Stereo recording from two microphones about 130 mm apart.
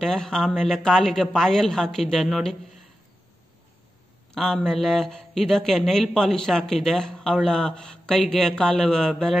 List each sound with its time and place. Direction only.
0.0 s a man's voice: 5° left (ahead or behind)
4.3 s a man's voice: 5° left (ahead or behind)